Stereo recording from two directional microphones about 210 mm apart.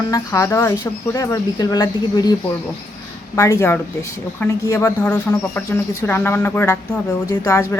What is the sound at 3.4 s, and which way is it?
Speech, 15° left (ahead or behind).